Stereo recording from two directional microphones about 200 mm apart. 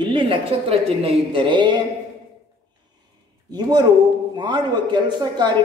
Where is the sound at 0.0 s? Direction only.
25° right (ahead or behind).